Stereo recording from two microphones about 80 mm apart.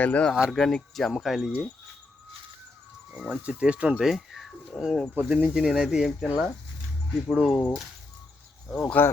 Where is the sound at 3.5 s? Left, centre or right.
Centre.